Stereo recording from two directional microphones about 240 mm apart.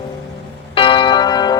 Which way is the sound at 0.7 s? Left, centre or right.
Left.